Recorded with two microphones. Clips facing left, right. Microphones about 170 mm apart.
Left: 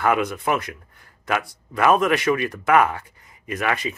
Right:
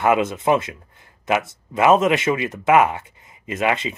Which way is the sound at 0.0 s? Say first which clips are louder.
Right 3 dB; 25° right (ahead or behind).